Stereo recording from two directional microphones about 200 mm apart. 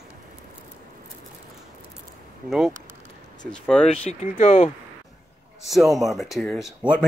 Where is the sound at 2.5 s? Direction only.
Centre (ahead or behind).